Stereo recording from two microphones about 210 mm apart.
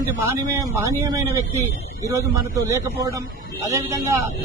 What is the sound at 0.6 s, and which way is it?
Speech, 15° right (ahead or behind).